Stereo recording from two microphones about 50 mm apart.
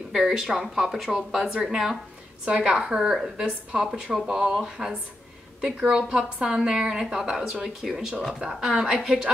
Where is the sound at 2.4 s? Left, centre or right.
Centre.